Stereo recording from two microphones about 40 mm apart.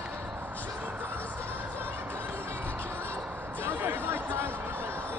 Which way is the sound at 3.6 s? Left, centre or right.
Right.